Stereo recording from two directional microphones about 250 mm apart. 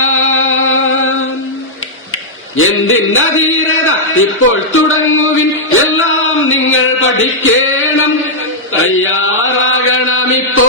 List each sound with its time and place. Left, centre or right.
0.0 s music: left
2.6 s a man's voice: left
8.7 s chant: left